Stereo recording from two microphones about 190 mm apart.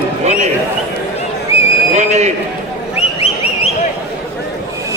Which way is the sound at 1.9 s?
35° right (ahead or behind).